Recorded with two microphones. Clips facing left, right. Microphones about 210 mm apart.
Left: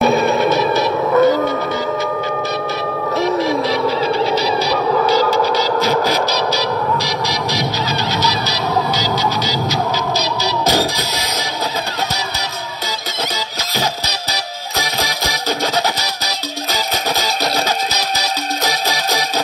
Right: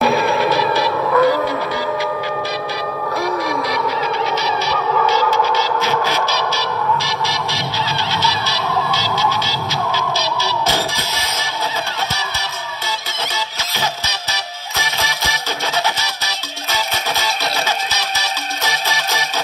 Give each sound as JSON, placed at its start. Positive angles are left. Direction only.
{"t": 0.0, "sound": "music", "side_deg": 20}
{"t": 3.2, "sound": "a sound", "side_deg": 25}
{"t": 8.2, "sound": "music", "side_deg": 40}
{"t": 13.7, "sound": "music", "side_deg": 35}